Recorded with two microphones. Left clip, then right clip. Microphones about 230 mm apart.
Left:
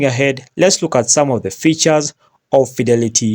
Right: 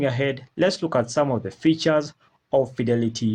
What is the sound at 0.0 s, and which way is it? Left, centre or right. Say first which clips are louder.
Speech: left 9 dB; left.